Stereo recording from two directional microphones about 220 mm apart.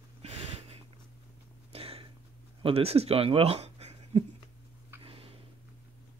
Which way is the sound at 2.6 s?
25° right (ahead or behind).